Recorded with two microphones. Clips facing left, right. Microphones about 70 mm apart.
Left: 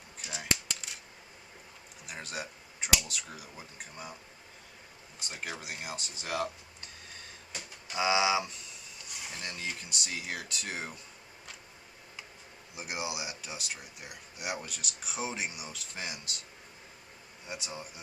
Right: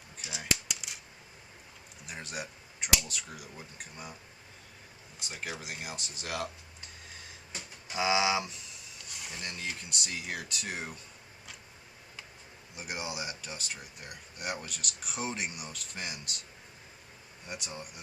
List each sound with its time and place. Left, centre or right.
0.3 s scissors: centre
2.0 s speech: centre
5.3 s speech: centre
7.9 s speech: centre
12.7 s speech: centre
17.4 s speech: centre